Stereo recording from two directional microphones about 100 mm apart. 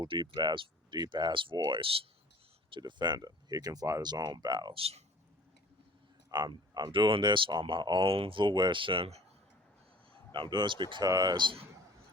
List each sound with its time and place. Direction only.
0.0 s speech: 50° right (ahead or behind)
2.6 s speech: 50° right (ahead or behind)
4.7 s speech: 80° right
6.3 s speech: 45° right (ahead or behind); by 9.2 s 75° right (ahead or behind)
10.3 s speech: 55° right (ahead or behind)
11.0 s speech: 40° right (ahead or behind)